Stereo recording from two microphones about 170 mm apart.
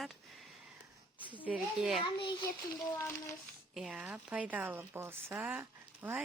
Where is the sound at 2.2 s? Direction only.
30° left (ahead or behind).